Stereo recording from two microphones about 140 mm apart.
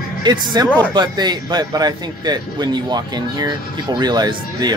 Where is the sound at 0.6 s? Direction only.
10° left (ahead or behind).